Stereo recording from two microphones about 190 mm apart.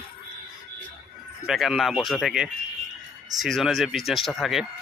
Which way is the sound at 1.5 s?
Centre (ahead or behind).